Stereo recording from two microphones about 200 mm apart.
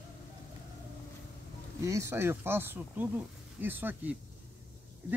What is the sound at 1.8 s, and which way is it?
Speech, 15° right (ahead or behind).